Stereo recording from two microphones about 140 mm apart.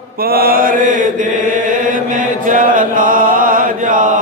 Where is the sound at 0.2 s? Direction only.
90° right.